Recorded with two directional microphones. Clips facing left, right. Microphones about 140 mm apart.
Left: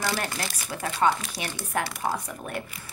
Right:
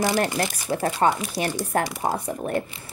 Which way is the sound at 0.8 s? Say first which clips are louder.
Right 2 dB; 35° right (ahead or behind).